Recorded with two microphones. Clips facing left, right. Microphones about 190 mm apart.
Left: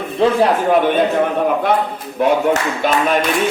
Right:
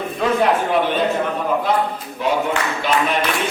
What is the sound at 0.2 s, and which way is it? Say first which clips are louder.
Speech: left 5 dB; 30° left (ahead or behind).